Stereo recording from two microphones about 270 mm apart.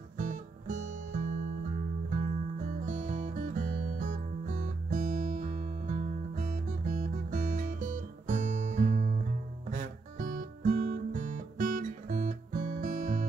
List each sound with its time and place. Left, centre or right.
0.2 s guitar: right
2.8 s music: right
9.7 s guitar: right